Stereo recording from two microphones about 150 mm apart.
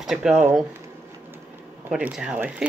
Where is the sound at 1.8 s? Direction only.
5° right (ahead or behind).